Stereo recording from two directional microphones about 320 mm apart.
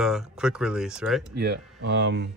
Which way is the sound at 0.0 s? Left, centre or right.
Centre.